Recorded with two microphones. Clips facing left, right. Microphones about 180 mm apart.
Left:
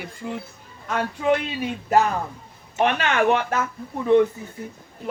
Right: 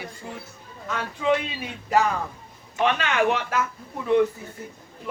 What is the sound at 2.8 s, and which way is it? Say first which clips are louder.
Speech: left 2 dB; 50° left (ahead or behind).